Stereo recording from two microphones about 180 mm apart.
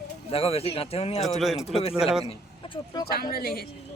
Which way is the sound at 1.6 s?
35° left (ahead or behind).